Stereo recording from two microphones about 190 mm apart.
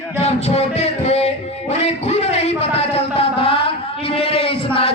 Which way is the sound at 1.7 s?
35° left (ahead or behind).